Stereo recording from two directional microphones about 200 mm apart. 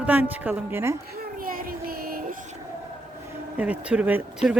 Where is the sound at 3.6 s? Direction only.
5° right (ahead or behind).